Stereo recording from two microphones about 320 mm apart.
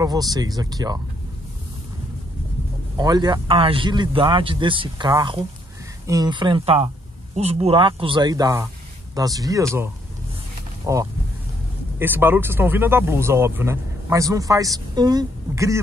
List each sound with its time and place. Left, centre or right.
0.0 s speech: centre
3.0 s speech: centre
10.9 s speech: centre